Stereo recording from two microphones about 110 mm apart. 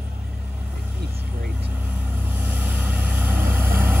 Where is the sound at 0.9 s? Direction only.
20° right (ahead or behind).